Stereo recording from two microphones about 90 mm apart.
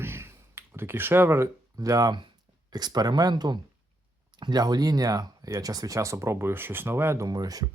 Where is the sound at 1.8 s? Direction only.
40° right (ahead or behind).